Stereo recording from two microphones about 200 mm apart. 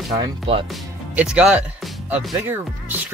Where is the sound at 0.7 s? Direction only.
5° right (ahead or behind).